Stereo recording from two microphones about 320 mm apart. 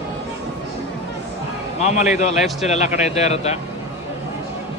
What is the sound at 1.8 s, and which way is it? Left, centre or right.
Speech, left.